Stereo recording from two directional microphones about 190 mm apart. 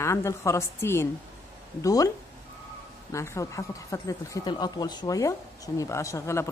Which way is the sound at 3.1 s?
15° left (ahead or behind).